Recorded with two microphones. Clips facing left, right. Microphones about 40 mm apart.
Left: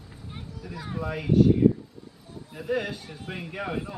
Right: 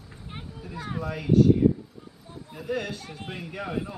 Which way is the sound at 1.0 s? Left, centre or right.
Centre.